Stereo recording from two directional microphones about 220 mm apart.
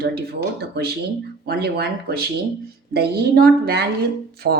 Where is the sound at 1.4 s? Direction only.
45° right (ahead or behind).